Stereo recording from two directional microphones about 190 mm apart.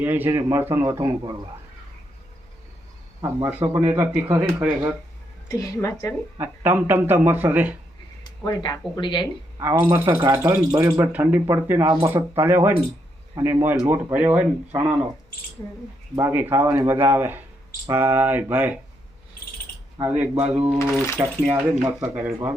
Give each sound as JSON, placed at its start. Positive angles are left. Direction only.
{"t": 0.0, "sound": "a man's voice", "side_deg": -10}
{"t": 3.2, "sound": "a man's voice", "side_deg": -15}
{"t": 5.5, "sound": "a woman's voice", "side_deg": 15}
{"t": 6.4, "sound": "a man's voice", "side_deg": -10}
{"t": 8.2, "sound": "a sound", "side_deg": 20}
{"t": 9.0, "sound": "speech", "side_deg": 25}
{"t": 9.6, "sound": "a man's voice", "side_deg": -15}
{"t": 10.1, "sound": "speech", "side_deg": -25}
{"t": 10.3, "sound": "a man's voice", "side_deg": -15}
{"t": 16.1, "sound": "a man's voice", "side_deg": -10}
{"t": 20.0, "sound": "a man's voice", "side_deg": -10}